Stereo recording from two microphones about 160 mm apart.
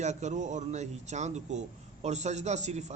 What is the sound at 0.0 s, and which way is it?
A man's voice, 45° right (ahead or behind).